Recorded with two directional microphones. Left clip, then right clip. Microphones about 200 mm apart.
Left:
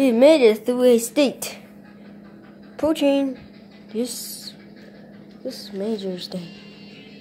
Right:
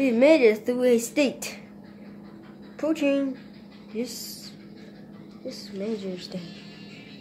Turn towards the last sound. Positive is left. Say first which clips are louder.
# left 5 dB
turn(degrees=20)  # may be behind; listen again after turning